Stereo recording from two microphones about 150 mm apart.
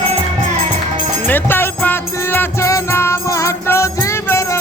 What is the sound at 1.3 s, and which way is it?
Music, 15° left (ahead or behind).